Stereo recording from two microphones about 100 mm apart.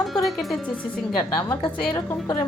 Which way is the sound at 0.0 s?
Centre (ahead or behind).